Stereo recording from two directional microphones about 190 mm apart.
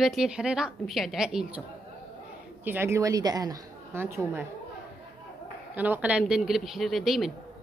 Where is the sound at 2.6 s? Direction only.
10° right (ahead or behind).